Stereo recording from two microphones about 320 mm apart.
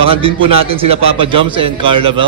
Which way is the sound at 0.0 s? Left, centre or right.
Centre.